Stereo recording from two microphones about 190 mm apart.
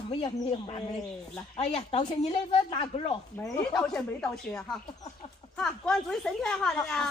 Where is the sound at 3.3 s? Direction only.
15° left (ahead or behind).